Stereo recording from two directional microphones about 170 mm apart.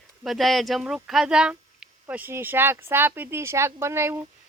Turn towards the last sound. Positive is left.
turn(degrees=-15)  # may be behind; listen again after turning